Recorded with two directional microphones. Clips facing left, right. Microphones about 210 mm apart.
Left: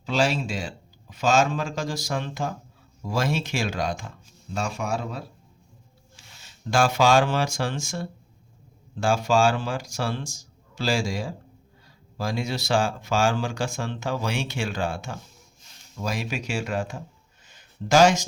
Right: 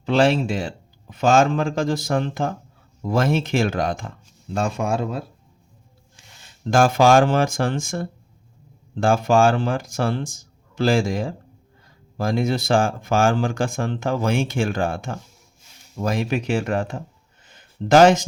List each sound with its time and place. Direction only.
0.0 s speech: 55° right (ahead or behind)
6.7 s speech: 50° right (ahead or behind)
17.5 s a sound: 55° right (ahead or behind)